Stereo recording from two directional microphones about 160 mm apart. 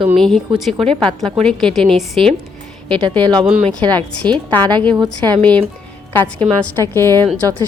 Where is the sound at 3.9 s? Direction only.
5° left (ahead or behind).